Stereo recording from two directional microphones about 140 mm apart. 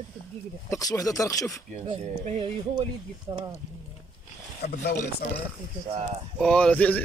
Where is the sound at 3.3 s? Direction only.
45° right (ahead or behind).